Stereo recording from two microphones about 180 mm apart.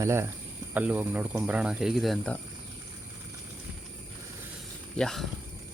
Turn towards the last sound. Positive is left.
turn(degrees=0)  # may be behind; listen again after turning